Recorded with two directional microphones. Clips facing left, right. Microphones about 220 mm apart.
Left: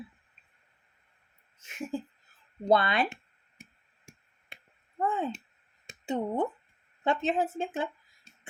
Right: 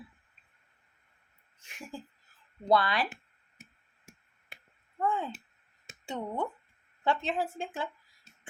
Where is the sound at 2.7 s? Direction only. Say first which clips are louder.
Left 2 dB; 25° left (ahead or behind).